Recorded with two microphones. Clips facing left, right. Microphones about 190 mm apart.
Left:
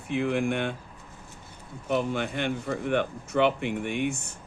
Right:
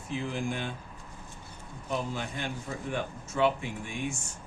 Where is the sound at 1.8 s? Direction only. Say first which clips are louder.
Left 6 dB; 70° left (ahead or behind).